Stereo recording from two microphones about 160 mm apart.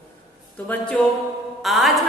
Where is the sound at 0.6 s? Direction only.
5° left (ahead or behind).